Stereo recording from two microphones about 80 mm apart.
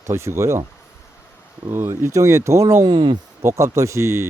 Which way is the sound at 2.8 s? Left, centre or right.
Right.